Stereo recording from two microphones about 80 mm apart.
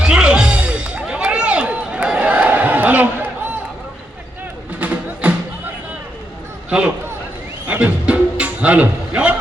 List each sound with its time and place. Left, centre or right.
0.0 s music: centre
4.8 s music: centre
7.7 s music: centre